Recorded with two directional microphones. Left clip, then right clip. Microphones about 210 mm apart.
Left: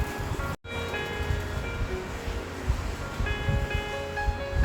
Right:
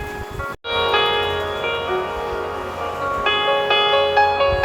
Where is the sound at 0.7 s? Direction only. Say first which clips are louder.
Right 18 dB; 55° right (ahead or behind).